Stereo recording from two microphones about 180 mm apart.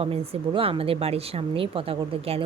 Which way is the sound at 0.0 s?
35° right (ahead or behind).